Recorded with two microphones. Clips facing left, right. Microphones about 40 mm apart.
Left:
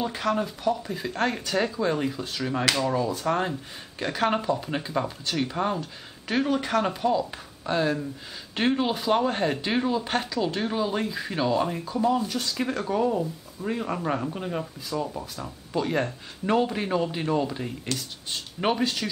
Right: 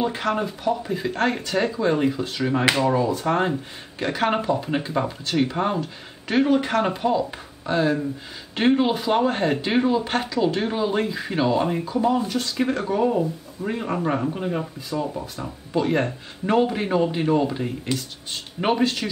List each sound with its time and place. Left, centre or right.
0.0 s speech: centre